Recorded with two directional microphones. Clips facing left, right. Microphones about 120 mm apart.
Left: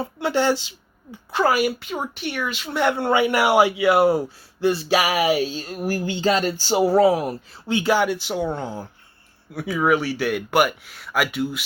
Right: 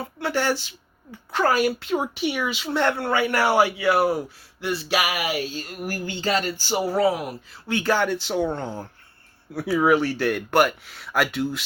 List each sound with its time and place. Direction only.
0.0 s speech: 20° left (ahead or behind)
1.3 s speech: 10° left (ahead or behind)
2.8 s a man's voice: 20° left (ahead or behind)
7.7 s a man's voice: 15° left (ahead or behind)